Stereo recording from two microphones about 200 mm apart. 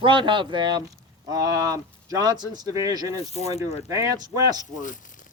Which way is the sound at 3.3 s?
30° left (ahead or behind).